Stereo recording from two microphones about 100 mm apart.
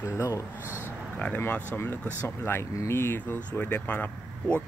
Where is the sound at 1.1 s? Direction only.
10° left (ahead or behind).